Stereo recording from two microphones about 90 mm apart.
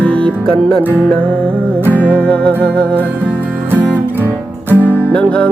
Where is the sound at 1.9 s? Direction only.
15° left (ahead or behind).